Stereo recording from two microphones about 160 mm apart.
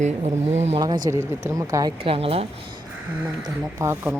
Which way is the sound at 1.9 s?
35° right (ahead or behind).